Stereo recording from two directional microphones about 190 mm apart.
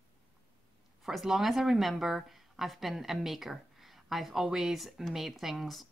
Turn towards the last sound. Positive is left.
turn(degrees=0)  # may be behind; listen again after turning